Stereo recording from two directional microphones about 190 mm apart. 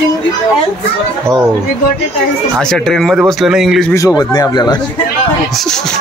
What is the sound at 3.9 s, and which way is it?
Speech, 15° left (ahead or behind).